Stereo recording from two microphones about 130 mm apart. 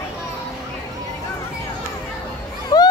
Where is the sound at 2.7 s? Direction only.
30° left (ahead or behind).